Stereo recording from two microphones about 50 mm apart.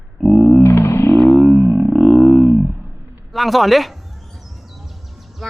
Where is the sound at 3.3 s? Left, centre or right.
Centre.